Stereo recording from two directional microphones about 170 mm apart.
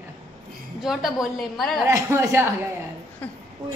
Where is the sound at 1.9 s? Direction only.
15° right (ahead or behind).